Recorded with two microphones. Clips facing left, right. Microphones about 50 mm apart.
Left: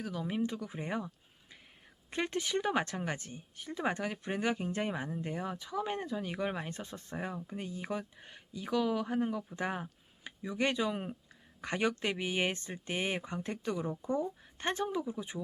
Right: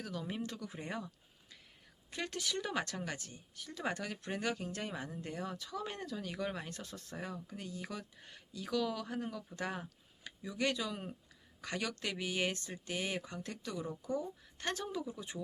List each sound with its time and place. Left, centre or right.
0.0 s speech: centre
2.0 s speech: left